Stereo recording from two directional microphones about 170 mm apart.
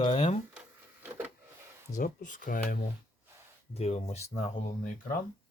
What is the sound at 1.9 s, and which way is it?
Speech, 50° left (ahead or behind).